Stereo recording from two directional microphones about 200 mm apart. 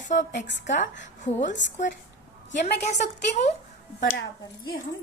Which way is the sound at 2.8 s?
35° left (ahead or behind).